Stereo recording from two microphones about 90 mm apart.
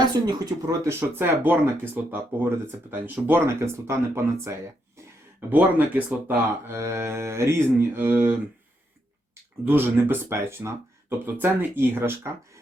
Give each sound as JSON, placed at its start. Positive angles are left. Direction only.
{"t": 0.3, "sound": "speech", "side_deg": -40}
{"t": 0.9, "sound": "speech", "side_deg": -25}
{"t": 5.5, "sound": "speech", "side_deg": -20}
{"t": 9.6, "sound": "speech", "side_deg": -20}